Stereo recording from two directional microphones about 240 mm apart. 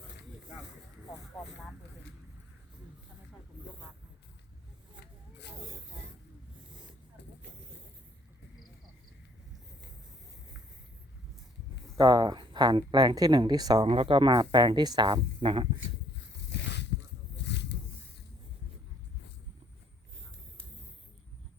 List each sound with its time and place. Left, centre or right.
11.9 s speech: centre
16.5 s zipper: left
17.5 s a sound: left